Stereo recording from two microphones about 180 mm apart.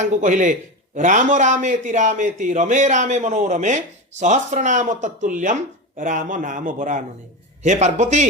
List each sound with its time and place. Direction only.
0.0 s a man's voice: 40° right (ahead or behind)